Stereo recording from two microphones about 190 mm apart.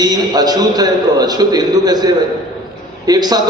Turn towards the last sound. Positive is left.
turn(degrees=-20)  # may be behind; listen again after turning